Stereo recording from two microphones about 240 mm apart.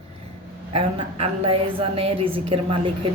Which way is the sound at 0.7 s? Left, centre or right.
Right.